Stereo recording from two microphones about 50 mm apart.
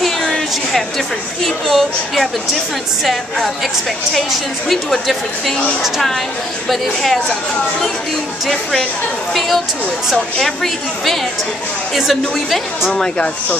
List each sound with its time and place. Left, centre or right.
0.0 s a sound: centre
1.4 s a woman's voice: centre
5.8 s a woman's voice: centre
10.4 s a woman's voice: centre
12.9 s speech: left